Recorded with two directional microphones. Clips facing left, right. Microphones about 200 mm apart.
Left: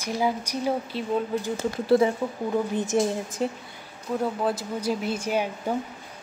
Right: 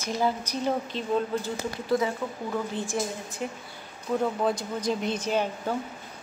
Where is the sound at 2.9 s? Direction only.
20° left (ahead or behind).